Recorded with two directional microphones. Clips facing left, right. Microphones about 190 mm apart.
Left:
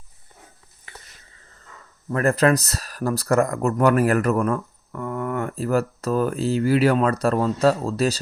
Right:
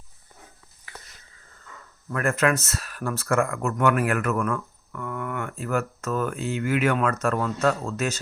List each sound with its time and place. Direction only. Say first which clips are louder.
2.0 s speech: left 5 dB; 35° left (ahead or behind)